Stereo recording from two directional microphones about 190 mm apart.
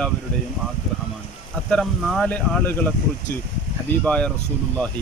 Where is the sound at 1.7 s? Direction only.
Centre (ahead or behind).